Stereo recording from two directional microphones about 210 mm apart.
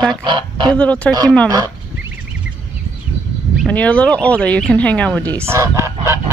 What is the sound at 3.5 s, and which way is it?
Speech, 5° left (ahead or behind).